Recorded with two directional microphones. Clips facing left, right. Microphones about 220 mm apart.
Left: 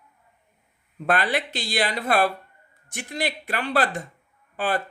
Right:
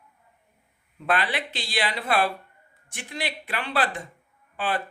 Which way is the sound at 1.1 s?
45° left (ahead or behind).